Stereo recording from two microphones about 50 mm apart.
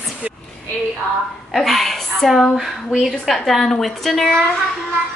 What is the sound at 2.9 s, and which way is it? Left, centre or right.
A woman's voice, centre.